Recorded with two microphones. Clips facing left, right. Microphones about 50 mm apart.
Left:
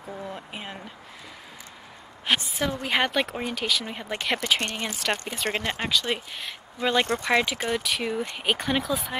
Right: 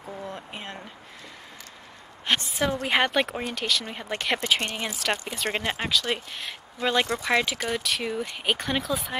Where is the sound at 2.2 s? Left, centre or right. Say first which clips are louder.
Even; centre.